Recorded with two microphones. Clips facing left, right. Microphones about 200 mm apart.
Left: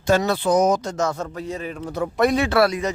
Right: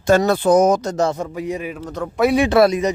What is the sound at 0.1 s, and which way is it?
Speech, 50° right (ahead or behind).